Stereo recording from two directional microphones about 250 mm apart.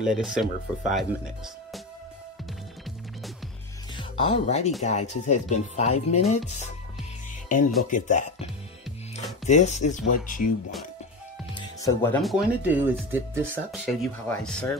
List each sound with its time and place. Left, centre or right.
0.0 s speech: centre
3.9 s speech: left
7.4 s speech: left
9.5 s speech: left
11.5 s speech: centre